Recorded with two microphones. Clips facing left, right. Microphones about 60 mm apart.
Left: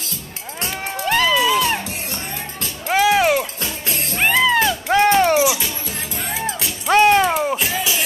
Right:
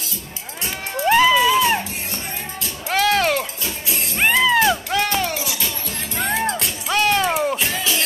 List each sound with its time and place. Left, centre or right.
1.0 s music: centre
2.9 s music: centre
3.6 s music: left
4.4 s music: centre
4.8 s music: left
6.2 s music: centre
6.9 s a sound: left
7.2 s music: centre